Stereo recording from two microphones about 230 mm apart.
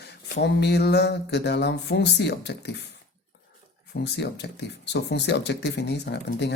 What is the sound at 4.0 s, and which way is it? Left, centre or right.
Speech, left.